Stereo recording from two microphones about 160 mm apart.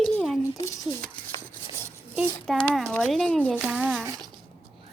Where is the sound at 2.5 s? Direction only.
5° left (ahead or behind).